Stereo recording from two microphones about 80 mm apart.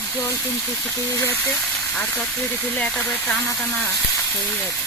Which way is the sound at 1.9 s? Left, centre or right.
Left.